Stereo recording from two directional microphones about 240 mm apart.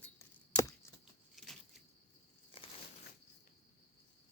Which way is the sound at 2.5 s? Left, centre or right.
Left.